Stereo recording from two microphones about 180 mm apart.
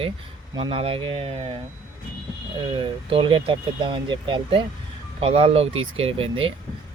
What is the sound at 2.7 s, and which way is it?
Speech, 30° right (ahead or behind).